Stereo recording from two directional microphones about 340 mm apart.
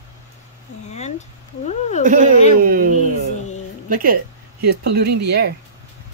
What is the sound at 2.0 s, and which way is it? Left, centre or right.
Speech, right.